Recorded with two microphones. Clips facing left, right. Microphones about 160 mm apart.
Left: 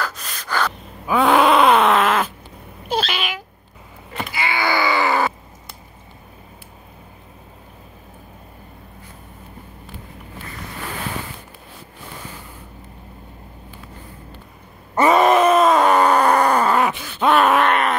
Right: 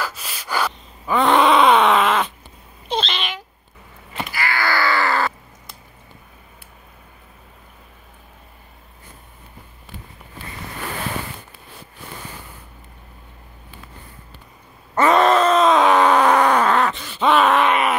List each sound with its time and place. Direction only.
0.0 s gasp: 5° right (ahead or behind)
1.0 s groan: 5° left (ahead or behind)
2.9 s meow: 5° left (ahead or behind)
4.3 s groan: 20° left (ahead or behind)
15.0 s groan: 10° left (ahead or behind)